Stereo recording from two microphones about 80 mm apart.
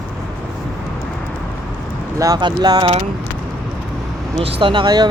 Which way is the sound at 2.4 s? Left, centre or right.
Right.